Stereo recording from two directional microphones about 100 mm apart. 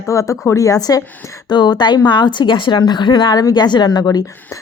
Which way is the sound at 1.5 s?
45° left (ahead or behind).